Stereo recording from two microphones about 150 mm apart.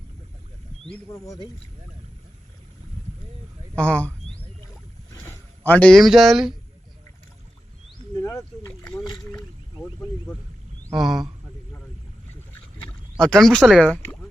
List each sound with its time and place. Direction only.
3.8 s speech: 10° left (ahead or behind)
8.2 s a sound: 20° left (ahead or behind)
10.9 s speech: centre (ahead or behind)
13.1 s speech: 5° left (ahead or behind)